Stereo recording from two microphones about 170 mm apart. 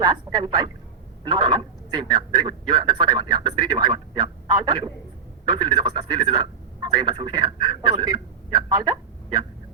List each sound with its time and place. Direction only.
0.0 s speech: 25° right (ahead or behind)